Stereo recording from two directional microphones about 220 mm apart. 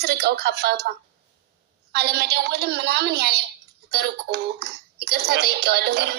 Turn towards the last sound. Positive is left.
turn(degrees=-50)  # may be behind; listen again after turning